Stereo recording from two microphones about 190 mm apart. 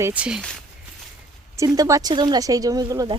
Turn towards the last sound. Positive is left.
turn(degrees=-20)  # may be behind; listen again after turning